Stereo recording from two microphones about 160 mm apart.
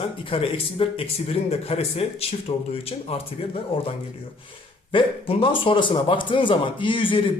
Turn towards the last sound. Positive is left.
turn(degrees=30)  # may be behind; listen again after turning